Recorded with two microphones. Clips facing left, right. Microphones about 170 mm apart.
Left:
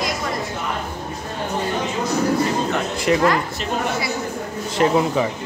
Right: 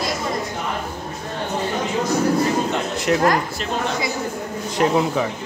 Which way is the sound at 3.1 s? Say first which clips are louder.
Left 1 dB; centre (ahead or behind).